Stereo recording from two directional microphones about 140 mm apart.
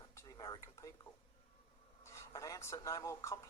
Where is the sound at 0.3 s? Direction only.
25° left (ahead or behind).